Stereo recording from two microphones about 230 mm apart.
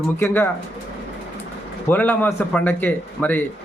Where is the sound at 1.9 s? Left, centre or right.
Centre.